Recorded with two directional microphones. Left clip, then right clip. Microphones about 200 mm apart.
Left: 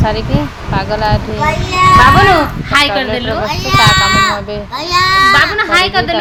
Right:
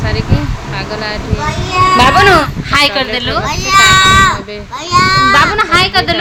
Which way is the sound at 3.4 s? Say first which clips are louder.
Right 2 dB; 10° right (ahead or behind).